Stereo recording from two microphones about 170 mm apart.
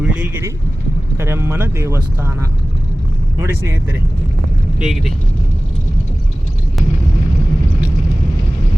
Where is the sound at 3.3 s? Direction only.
15° right (ahead or behind).